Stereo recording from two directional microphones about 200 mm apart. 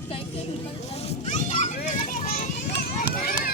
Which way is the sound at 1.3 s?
35° left (ahead or behind).